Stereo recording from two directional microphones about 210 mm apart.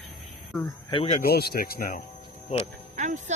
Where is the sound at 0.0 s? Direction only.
5° left (ahead or behind).